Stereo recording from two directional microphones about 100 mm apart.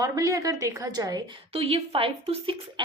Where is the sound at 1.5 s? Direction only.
75° right (ahead or behind).